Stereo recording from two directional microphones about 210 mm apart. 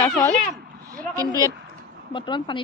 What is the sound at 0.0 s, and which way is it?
Speech, 10° left (ahead or behind).